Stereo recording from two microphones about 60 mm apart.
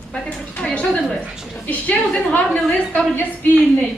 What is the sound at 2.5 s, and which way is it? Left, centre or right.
Speech, centre.